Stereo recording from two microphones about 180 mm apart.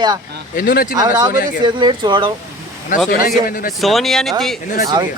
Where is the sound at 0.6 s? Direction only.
50° left (ahead or behind).